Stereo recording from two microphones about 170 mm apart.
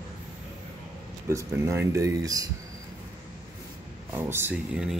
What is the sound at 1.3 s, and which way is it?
Speech, 15° right (ahead or behind).